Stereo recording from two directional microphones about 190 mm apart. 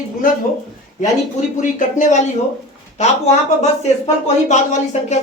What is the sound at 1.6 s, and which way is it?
Speech, 40° left (ahead or behind).